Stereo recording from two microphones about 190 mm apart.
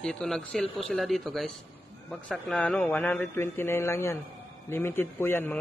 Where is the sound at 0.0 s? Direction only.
5° left (ahead or behind).